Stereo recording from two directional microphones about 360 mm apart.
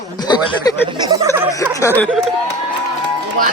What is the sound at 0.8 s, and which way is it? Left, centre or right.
Speech, centre.